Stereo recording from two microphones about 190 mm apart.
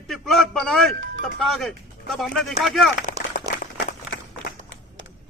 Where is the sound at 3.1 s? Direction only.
45° left (ahead or behind).